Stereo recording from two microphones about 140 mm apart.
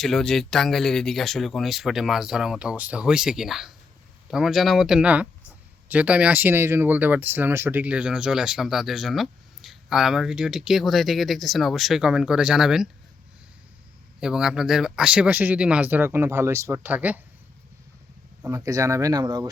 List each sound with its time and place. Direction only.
0.0 s speech: 5° left (ahead or behind)
14.2 s speech: 5° right (ahead or behind)
18.4 s speech: 25° right (ahead or behind)